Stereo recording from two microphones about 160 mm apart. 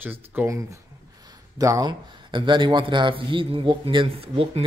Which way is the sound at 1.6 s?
20° right (ahead or behind).